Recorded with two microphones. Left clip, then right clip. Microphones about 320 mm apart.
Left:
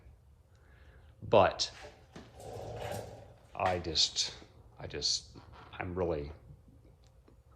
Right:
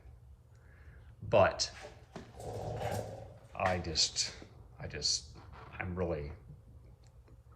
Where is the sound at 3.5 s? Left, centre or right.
Centre.